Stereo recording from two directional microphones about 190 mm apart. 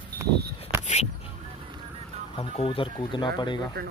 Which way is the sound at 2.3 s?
30° left (ahead or behind).